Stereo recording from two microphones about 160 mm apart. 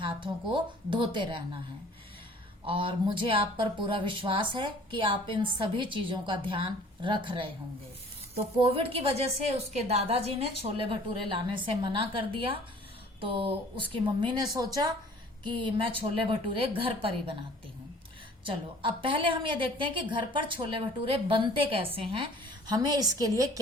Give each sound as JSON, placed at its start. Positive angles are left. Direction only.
{"t": 0.0, "sound": "a woman's voice", "side_deg": -30}
{"t": 2.6, "sound": "a woman's voice", "side_deg": -35}
{"t": 8.4, "sound": "a woman's voice", "side_deg": -35}
{"t": 18.4, "sound": "a woman's voice", "side_deg": -30}